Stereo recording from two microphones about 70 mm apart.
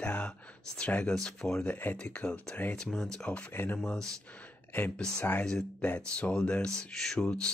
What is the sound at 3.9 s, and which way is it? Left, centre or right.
Speech, centre.